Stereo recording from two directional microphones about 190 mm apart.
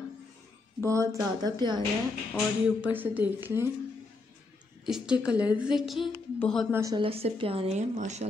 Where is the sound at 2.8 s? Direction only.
10° right (ahead or behind).